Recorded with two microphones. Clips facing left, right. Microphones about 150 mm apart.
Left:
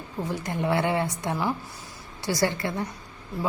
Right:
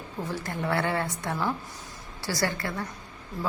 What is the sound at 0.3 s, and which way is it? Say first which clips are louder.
A woman's voice: left 3 dB; 15° left (ahead or behind).